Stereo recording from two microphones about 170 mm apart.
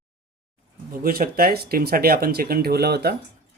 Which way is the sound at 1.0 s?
60° right (ahead or behind).